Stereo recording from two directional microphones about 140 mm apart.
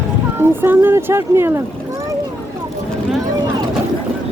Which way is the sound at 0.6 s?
15° right (ahead or behind).